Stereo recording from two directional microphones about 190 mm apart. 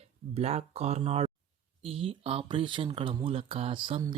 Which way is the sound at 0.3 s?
35° right (ahead or behind).